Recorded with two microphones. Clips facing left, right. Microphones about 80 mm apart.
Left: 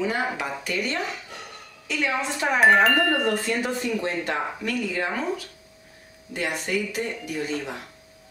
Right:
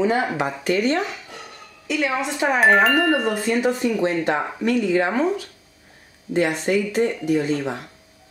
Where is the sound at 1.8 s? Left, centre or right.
Centre.